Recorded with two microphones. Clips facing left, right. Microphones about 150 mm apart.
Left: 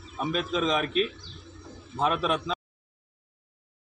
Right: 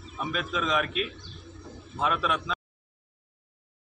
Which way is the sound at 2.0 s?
35° left (ahead or behind).